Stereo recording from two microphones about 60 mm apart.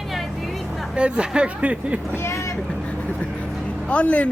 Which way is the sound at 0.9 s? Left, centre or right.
Centre.